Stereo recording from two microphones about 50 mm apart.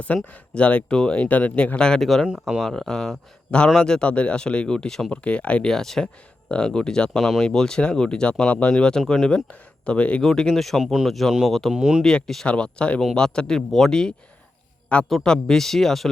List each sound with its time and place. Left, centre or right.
0.3 s speech: left; by 5.1 s centre
5.1 s speech: left
5.6 s speech: centre
7.2 s speech: centre
7.5 s speech: centre
8.7 s speech: centre
9.2 s speech: centre
10.2 s speech: centre
11.7 s speech: centre
12.0 s speech: centre
12.5 s speech: left
13.7 s speech: centre
13.9 s speech: centre
15.2 s speech: centre